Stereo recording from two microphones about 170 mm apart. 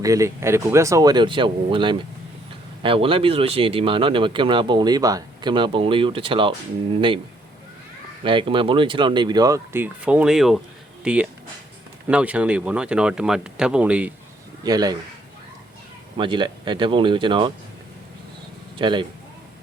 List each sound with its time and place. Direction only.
0.0 s a man's voice: 20° right (ahead or behind)
8.2 s speech: 30° right (ahead or behind); by 14.1 s 5° right (ahead or behind)
14.6 s a man's voice: 25° right (ahead or behind)
16.1 s speech: 30° right (ahead or behind)
18.8 s speech: 30° right (ahead or behind)